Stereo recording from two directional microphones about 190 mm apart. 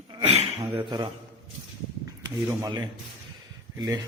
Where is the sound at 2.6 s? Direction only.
20° right (ahead or behind).